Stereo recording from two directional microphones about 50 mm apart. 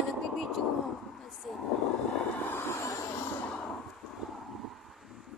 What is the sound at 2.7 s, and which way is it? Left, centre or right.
Vehicle, left.